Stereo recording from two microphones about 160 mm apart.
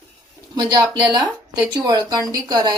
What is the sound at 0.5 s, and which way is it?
Speech, 20° right (ahead or behind).